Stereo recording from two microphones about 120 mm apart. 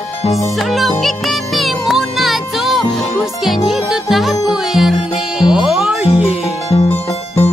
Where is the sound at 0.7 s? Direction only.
Centre (ahead or behind).